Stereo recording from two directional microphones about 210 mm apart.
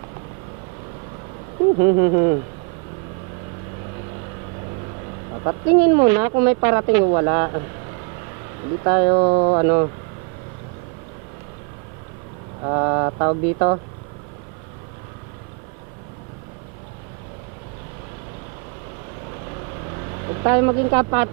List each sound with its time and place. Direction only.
1.8 s speech: 25° right (ahead or behind)
5.4 s speech: 20° right (ahead or behind)
8.8 s speech: 20° right (ahead or behind)
12.6 s speech: 20° right (ahead or behind)
20.4 s speech: 20° right (ahead or behind)